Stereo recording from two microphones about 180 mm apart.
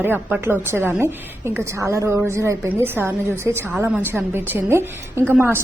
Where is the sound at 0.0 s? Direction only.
10° right (ahead or behind).